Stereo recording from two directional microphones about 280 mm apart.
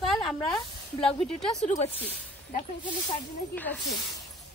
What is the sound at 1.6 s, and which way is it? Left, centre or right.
Speech, left.